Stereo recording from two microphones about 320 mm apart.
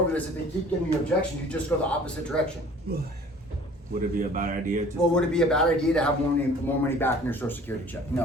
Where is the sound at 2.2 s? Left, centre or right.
Centre.